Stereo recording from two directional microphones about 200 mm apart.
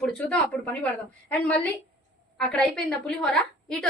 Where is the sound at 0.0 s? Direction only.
5° left (ahead or behind).